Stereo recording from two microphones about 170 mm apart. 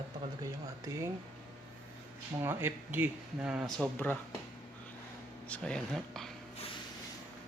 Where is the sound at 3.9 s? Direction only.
10° left (ahead or behind).